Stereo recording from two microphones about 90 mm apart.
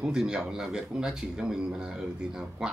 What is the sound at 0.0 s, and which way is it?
Speech, 10° right (ahead or behind).